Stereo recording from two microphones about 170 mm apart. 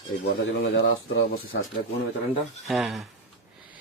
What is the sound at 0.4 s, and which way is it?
Speech, 90° left.